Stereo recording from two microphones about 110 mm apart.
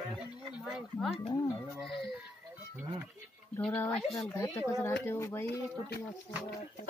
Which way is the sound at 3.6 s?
15° left (ahead or behind).